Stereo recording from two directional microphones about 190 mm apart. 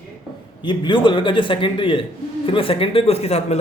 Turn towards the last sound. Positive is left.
turn(degrees=35)  # may be behind; listen again after turning